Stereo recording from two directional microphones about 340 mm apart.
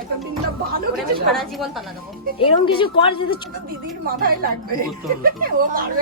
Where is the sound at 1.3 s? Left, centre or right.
Centre.